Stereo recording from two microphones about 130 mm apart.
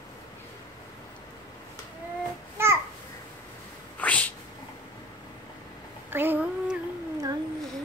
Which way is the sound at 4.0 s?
10° left (ahead or behind).